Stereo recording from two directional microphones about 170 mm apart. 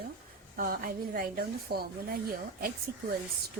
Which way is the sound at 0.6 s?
60° right (ahead or behind).